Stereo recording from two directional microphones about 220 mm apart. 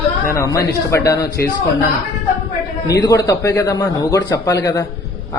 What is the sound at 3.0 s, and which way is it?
A man's voice, 15° left (ahead or behind).